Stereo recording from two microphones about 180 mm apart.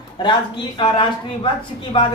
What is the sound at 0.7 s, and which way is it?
A man's voice, 30° left (ahead or behind).